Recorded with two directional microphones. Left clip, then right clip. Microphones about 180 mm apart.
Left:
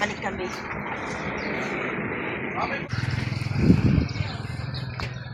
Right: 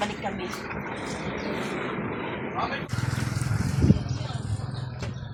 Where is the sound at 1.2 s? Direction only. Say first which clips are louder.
Left 2 dB; 30° left (ahead or behind).